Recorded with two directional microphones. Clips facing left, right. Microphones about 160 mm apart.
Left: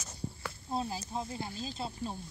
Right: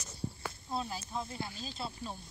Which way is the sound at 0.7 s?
35° left (ahead or behind).